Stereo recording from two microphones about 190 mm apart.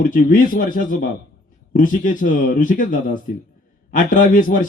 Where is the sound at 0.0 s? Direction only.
45° left (ahead or behind).